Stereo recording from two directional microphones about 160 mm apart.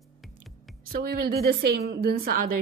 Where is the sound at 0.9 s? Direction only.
70° right (ahead or behind).